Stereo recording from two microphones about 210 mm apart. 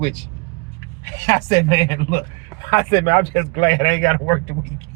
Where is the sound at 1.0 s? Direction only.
15° left (ahead or behind).